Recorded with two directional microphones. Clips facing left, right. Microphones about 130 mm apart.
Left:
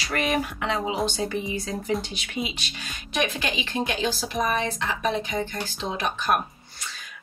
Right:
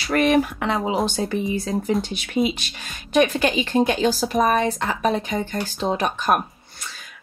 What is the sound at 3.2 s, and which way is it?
Speech, 45° right (ahead or behind).